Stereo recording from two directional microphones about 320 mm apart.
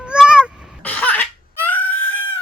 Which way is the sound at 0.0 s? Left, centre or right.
Centre.